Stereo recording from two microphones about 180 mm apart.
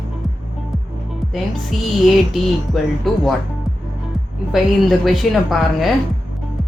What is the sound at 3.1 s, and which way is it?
Speech, centre (ahead or behind).